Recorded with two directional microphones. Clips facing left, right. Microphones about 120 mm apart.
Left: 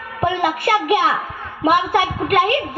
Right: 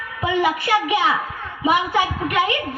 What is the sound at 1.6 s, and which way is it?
Speech, 55° left (ahead or behind).